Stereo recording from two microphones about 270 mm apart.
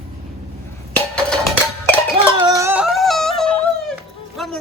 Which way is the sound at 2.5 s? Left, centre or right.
Centre.